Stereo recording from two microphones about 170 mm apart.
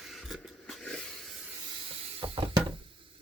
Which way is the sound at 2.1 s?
35° right (ahead or behind).